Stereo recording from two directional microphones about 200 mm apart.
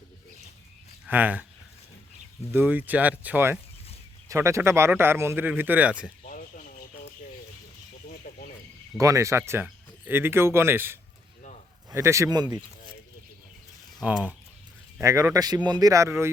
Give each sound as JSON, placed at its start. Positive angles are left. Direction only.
{"t": 1.0, "sound": "speech", "side_deg": -10}
{"t": 2.5, "sound": "speech", "side_deg": -10}
{"t": 6.2, "sound": "a sound", "side_deg": 40}
{"t": 8.0, "sound": "a sound", "side_deg": 45}
{"t": 9.0, "sound": "speech", "side_deg": -15}
{"t": 14.0, "sound": "speech", "side_deg": -5}
{"t": 15.0, "sound": "speech", "side_deg": -15}